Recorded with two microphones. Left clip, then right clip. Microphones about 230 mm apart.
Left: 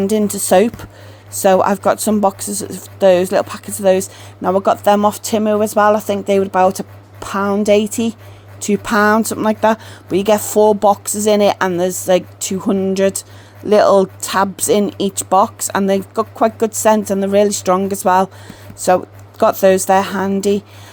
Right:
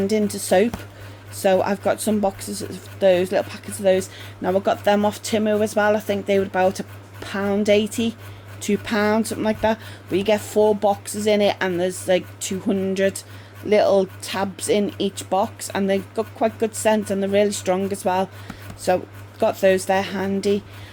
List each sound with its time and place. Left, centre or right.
0.0 s speech: left